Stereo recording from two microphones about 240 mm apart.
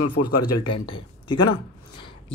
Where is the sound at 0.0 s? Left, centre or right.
Left.